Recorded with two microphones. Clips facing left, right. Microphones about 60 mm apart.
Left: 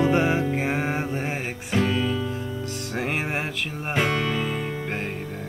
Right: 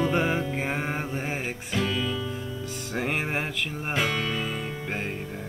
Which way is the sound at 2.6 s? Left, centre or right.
Centre.